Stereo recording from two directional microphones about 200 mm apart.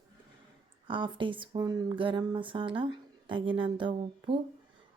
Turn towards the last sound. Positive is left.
turn(degrees=-25)  # may be behind; listen again after turning